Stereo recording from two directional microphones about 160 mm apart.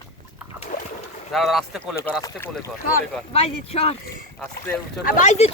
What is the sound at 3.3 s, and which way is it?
Speech, 40° left (ahead or behind).